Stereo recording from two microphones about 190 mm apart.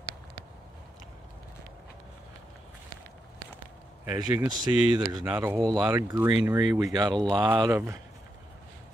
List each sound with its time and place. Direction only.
4.0 s speech: 10° right (ahead or behind)